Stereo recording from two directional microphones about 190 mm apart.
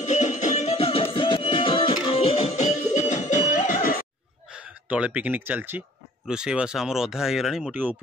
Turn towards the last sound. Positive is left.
turn(degrees=0)  # may be behind; listen again after turning